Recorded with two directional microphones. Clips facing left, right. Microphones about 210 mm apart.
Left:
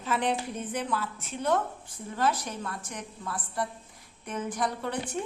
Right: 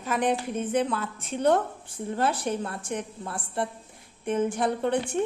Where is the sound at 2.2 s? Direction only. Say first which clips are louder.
Right 2 dB; 30° right (ahead or behind).